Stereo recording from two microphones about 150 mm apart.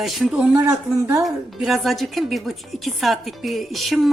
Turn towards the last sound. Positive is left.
turn(degrees=0)  # may be behind; listen again after turning